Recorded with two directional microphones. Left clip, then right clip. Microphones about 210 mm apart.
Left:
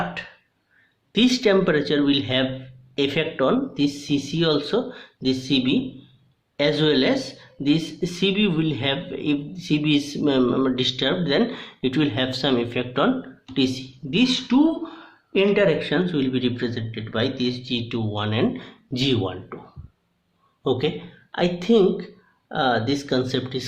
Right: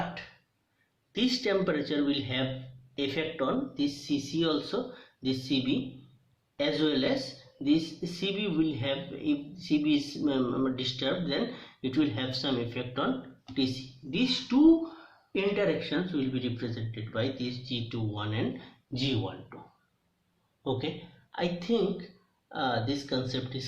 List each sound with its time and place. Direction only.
1.1 s speech: 45° left (ahead or behind)
14.1 s speech: 45° left (ahead or behind)
20.7 s speech: 50° left (ahead or behind)